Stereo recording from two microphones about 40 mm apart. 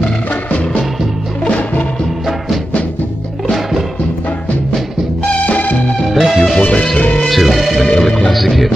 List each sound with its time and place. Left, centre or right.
1.4 s music: left
6.1 s music: centre
6.6 s speech: left
7.2 s music: centre
7.8 s music: centre
8.3 s music: centre